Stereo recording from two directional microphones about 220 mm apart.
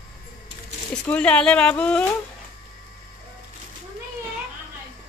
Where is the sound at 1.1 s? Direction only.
5° left (ahead or behind).